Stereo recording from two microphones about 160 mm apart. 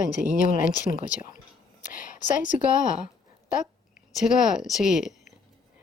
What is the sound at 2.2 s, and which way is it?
Speech, 55° left (ahead or behind).